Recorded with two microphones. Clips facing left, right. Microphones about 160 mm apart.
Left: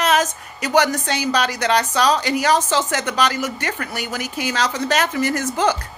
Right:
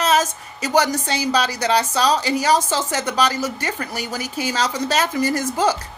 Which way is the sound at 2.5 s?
10° right (ahead or behind).